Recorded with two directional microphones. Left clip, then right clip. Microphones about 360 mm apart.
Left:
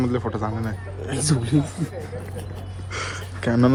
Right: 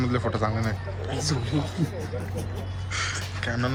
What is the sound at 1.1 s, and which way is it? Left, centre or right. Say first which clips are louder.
Speech: left 4 dB; left.